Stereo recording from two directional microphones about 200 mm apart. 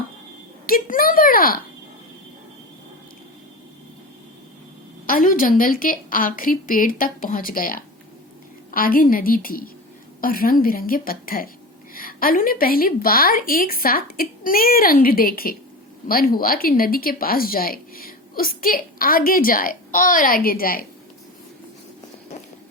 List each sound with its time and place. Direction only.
0.7 s speech: 45° left (ahead or behind)
5.0 s speech: 45° left (ahead or behind)